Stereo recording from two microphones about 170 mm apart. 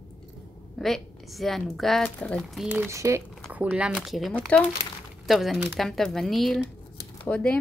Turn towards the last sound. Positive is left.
turn(degrees=10)  # may be behind; listen again after turning